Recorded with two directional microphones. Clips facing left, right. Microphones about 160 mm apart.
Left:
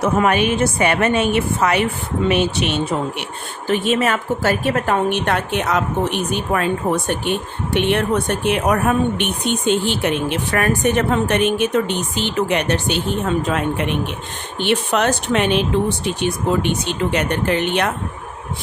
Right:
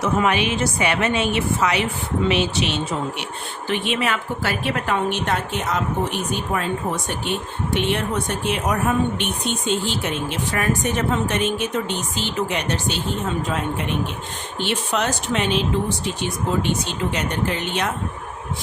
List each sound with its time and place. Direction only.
0.0 s a woman's voice: 50° left (ahead or behind)
3.7 s a woman's voice: 40° left (ahead or behind); by 13.0 s 60° left (ahead or behind)
14.6 s a woman's voice: 60° left (ahead or behind)